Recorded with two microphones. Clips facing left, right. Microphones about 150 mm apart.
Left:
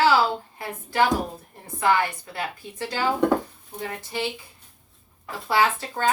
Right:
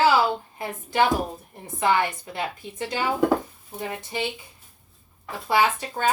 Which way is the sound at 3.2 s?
Centre (ahead or behind).